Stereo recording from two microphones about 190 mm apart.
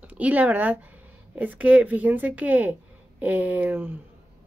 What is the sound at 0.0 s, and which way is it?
Speech, 10° right (ahead or behind).